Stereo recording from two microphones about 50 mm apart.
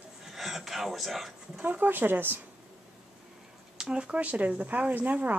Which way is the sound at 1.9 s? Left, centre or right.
Right.